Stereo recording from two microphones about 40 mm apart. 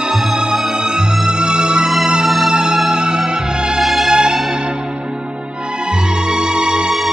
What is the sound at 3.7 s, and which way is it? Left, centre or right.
Music, centre.